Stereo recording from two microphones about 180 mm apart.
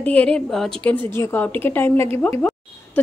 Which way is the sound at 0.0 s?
5° left (ahead or behind).